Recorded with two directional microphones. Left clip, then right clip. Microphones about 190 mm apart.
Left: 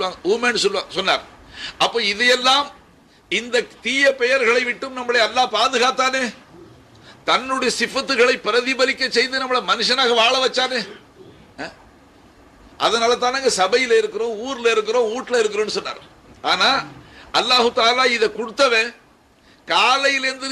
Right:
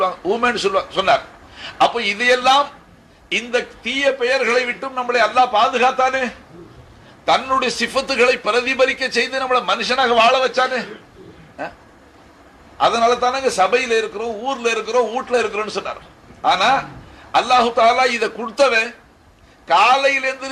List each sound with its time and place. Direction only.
0.0 s a man's voice: 35° left (ahead or behind)
7.3 s a man's voice: 40° left (ahead or behind)
12.7 s a man's voice: 30° left (ahead or behind)